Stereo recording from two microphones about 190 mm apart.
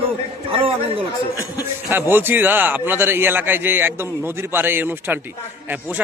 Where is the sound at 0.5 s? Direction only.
30° right (ahead or behind).